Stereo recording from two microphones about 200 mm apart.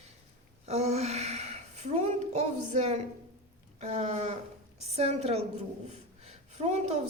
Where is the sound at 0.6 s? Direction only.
30° right (ahead or behind).